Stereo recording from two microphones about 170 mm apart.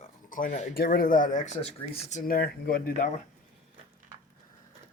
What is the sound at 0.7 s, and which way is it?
Speech, 60° left (ahead or behind).